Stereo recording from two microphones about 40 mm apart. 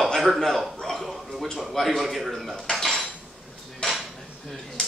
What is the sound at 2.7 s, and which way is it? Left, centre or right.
Cutlery, centre.